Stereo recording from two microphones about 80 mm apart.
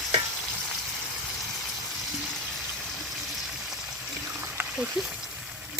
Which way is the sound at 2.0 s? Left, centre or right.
Centre.